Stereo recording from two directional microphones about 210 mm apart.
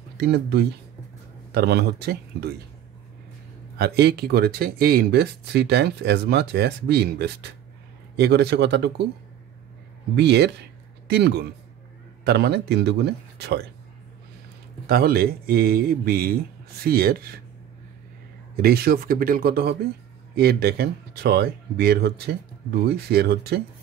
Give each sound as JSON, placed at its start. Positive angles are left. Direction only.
{"t": 0.2, "sound": "speech", "side_deg": -50}
{"t": 3.7, "sound": "speech", "side_deg": -50}
{"t": 10.1, "sound": "speech", "side_deg": -55}
{"t": 14.9, "sound": "speech", "side_deg": -45}
{"t": 18.6, "sound": "speech", "side_deg": -45}